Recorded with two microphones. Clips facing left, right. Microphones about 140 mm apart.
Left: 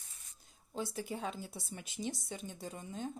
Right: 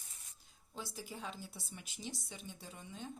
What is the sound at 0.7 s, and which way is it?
A woman's voice, 55° left (ahead or behind).